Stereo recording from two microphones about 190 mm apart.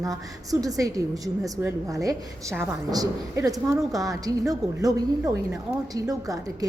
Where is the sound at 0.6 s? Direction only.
15° right (ahead or behind).